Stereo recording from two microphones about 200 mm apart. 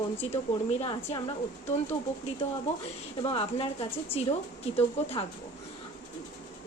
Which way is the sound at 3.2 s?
30° left (ahead or behind).